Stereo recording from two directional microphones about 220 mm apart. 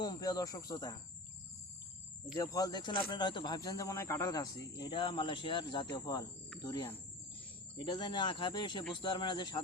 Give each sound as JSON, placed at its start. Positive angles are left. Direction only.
{"t": 0.0, "sound": "speech", "side_deg": 15}
{"t": 2.3, "sound": "speech", "side_deg": 15}